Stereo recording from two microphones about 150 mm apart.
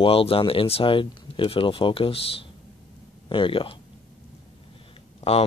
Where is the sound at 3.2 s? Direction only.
35° left (ahead or behind).